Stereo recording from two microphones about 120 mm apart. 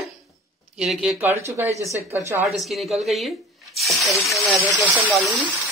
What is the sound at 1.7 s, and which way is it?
Speech, 25° left (ahead or behind).